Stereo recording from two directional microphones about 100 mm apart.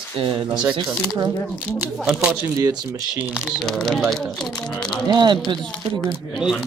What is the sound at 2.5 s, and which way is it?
Speech, 35° right (ahead or behind).